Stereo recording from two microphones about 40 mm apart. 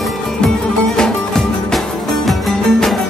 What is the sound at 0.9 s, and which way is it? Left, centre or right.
Music, centre.